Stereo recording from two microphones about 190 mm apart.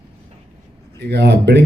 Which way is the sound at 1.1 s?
60° right (ahead or behind).